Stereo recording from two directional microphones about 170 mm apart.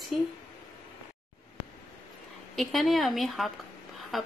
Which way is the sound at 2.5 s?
Centre (ahead or behind).